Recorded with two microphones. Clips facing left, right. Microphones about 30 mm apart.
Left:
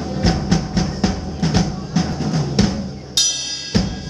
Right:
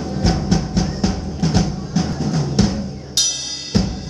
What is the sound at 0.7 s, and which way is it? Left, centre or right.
Music, left.